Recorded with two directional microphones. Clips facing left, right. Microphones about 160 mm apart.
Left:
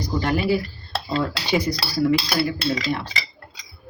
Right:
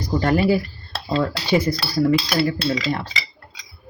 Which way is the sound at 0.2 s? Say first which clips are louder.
Right 4 dB; 40° right (ahead or behind).